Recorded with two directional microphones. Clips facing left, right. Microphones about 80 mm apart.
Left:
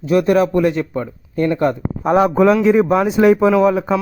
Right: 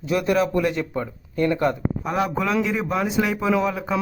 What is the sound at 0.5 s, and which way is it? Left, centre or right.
Speech, left.